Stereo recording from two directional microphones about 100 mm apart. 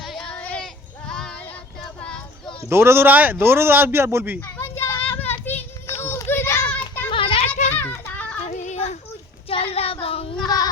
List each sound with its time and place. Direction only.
0.0 s a sound: centre (ahead or behind)
0.3 s child singing: 15° left (ahead or behind)
2.6 s speech: 25° right (ahead or behind)
4.4 s a sound: 20° left (ahead or behind)
4.8 s children playing: 20° left (ahead or behind)
6.7 s child singing: 15° left (ahead or behind)
7.1 s children playing: 60° left (ahead or behind)
7.5 s children playing: 20° left (ahead or behind)
9.7 s child singing: 75° left (ahead or behind)
10.4 s child singing: 40° left (ahead or behind)